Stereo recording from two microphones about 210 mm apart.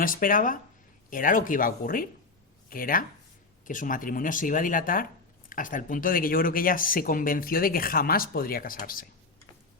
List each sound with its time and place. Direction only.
0.0 s speech: 40° left (ahead or behind)